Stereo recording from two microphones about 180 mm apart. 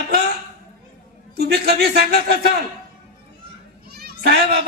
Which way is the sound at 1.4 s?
60° right (ahead or behind).